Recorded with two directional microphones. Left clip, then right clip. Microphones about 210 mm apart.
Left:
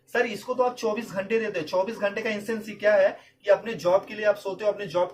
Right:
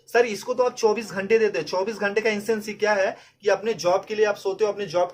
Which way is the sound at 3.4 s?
45° right (ahead or behind).